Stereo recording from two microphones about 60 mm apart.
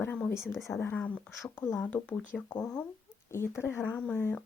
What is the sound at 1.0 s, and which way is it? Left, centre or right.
Speech, left.